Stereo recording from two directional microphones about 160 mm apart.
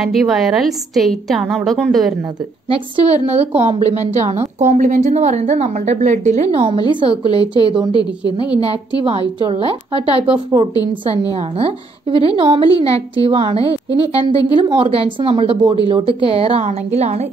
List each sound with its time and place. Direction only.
0.0 s a woman's voice: centre (ahead or behind)
2.7 s a woman's voice: 40° right (ahead or behind)
9.4 s a woman's voice: 35° right (ahead or behind)
11.3 s a woman's voice: 35° right (ahead or behind)